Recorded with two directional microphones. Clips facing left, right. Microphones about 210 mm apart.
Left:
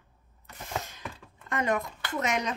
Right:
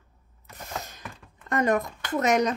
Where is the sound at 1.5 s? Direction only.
40° right (ahead or behind).